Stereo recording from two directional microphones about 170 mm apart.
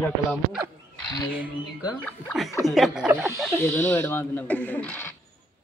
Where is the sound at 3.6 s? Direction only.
10° left (ahead or behind).